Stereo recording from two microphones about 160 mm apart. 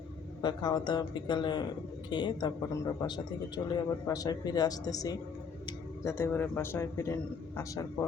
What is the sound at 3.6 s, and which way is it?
A man's voice, 25° left (ahead or behind).